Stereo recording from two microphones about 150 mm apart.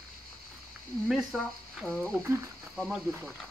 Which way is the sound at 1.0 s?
Centre (ahead or behind).